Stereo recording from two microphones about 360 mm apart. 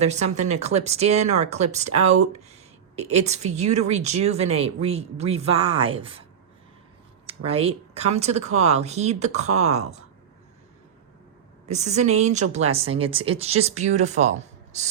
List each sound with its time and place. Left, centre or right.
0.0 s speech: centre
7.3 s speech: centre
11.7 s speech: centre